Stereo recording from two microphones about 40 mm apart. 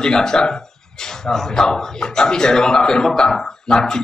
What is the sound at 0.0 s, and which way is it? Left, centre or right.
Speech, centre.